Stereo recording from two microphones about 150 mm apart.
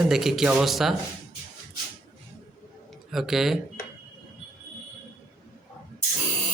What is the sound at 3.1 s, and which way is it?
Speech, centre (ahead or behind).